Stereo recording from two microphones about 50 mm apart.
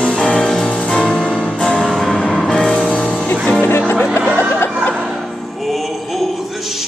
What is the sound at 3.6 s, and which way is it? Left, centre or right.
Music, left.